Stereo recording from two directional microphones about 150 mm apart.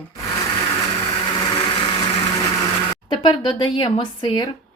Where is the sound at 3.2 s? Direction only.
35° left (ahead or behind).